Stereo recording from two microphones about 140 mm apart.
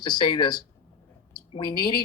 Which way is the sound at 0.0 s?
30° left (ahead or behind).